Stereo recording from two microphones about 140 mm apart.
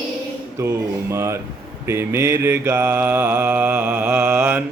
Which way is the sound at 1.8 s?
20° right (ahead or behind).